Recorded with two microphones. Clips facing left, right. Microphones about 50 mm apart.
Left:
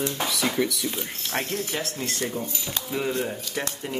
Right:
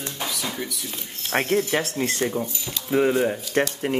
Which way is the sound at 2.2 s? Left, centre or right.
Right.